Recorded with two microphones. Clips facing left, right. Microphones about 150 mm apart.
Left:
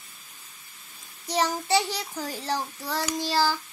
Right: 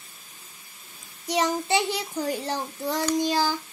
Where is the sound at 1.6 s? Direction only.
40° left (ahead or behind).